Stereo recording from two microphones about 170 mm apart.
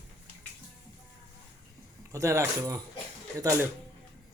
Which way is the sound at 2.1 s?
15° right (ahead or behind).